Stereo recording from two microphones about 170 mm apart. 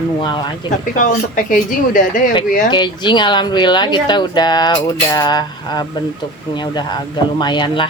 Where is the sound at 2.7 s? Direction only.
25° left (ahead or behind).